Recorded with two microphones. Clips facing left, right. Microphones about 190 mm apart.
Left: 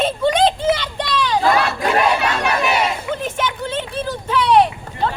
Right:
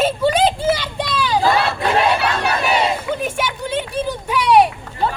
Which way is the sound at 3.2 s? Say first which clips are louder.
Even; 10° right (ahead or behind).